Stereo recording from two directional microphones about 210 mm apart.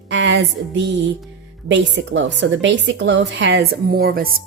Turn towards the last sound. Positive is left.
turn(degrees=-45)  # may be behind; listen again after turning